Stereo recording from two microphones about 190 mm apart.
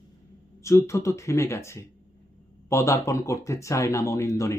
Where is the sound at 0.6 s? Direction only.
15° left (ahead or behind).